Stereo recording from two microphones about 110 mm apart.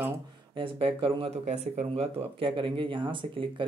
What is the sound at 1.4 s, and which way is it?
Speech, 90° right.